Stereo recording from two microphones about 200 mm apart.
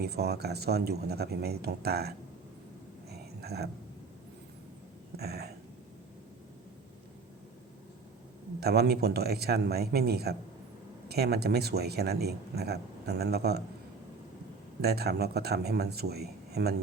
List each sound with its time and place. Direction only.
0.0 s speech: 55° right (ahead or behind)
3.1 s a sound: 55° right (ahead or behind)
5.1 s speech: 55° right (ahead or behind)
8.6 s speech: 55° right (ahead or behind)
14.8 s speech: 55° right (ahead or behind)